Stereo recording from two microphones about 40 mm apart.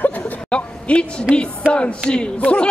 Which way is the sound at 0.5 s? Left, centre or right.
Left.